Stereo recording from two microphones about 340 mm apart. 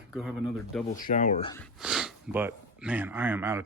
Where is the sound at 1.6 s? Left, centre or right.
Centre.